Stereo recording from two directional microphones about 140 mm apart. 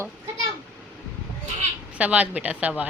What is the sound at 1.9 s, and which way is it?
Speech, 10° right (ahead or behind).